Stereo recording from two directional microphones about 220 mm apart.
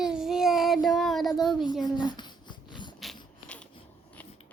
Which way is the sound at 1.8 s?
20° left (ahead or behind).